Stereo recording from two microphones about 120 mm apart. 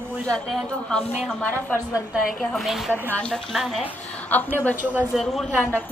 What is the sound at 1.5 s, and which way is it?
Speech, 15° left (ahead or behind).